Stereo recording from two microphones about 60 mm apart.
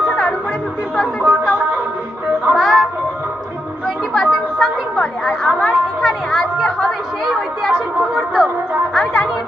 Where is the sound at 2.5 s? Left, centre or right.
Centre.